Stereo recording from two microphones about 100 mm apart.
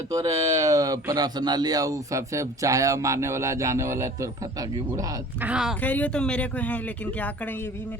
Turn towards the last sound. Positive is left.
turn(degrees=15)  # may be behind; listen again after turning